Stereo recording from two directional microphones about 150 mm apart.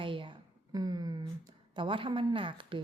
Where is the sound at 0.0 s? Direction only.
35° right (ahead or behind).